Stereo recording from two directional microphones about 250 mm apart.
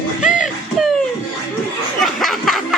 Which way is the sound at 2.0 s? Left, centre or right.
Centre.